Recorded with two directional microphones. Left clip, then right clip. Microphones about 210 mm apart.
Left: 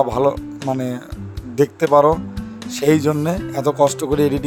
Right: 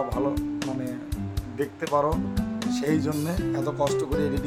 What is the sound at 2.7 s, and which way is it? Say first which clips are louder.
Speech: left 11 dB; 40° left (ahead or behind).